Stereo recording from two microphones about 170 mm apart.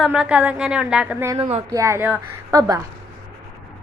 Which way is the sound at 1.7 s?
15° right (ahead or behind).